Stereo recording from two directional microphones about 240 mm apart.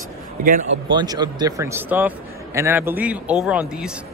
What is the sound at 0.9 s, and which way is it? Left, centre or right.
A man's voice, centre.